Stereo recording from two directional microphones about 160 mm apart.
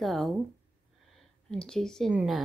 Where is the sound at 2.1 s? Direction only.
5° right (ahead or behind).